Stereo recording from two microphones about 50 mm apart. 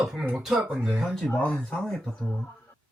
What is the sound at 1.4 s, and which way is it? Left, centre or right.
Speech, left.